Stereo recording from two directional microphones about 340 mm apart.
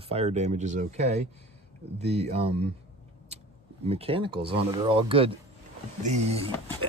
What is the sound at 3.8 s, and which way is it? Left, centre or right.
Speech, centre.